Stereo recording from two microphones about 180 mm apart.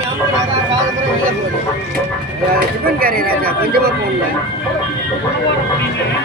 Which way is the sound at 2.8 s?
55° right (ahead or behind).